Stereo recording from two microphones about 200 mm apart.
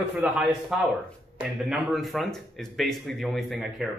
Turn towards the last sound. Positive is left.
turn(degrees=0)  # may be behind; listen again after turning